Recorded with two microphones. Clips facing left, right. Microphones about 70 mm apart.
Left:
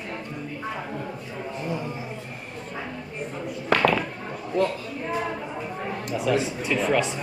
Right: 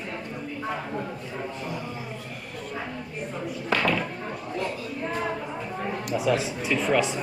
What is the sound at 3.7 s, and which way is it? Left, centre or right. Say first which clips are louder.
Speech: left 5 dB; left.